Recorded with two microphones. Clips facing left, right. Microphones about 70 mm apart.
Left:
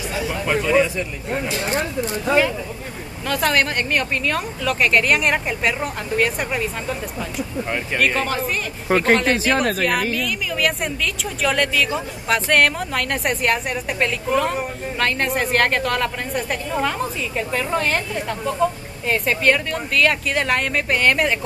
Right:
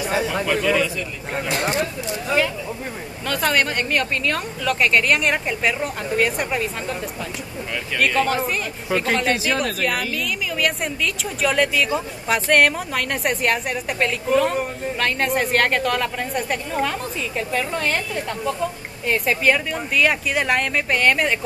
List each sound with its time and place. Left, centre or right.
0.5 s a man's voice: left
1.8 s speech: left
3.3 s a woman's voice: centre
8.0 s a woman's voice: centre
8.9 s speech: left
9.2 s a woman's voice: centre